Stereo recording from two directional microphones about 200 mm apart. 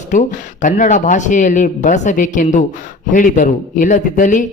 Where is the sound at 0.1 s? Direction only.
40° left (ahead or behind).